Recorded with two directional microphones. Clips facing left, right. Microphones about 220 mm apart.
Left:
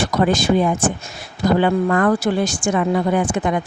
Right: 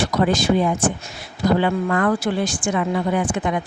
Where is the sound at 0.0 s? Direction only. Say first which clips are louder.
Left 1 dB; 50° left (ahead or behind).